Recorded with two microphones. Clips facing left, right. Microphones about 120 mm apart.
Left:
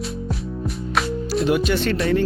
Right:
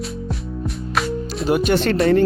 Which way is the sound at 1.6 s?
50° right (ahead or behind).